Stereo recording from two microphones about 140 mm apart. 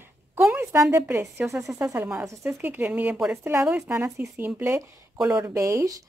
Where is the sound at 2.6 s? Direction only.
10° right (ahead or behind).